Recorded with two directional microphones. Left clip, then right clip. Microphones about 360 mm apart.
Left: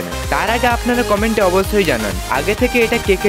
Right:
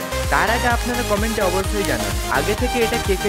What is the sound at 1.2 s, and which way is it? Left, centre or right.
Speech, centre.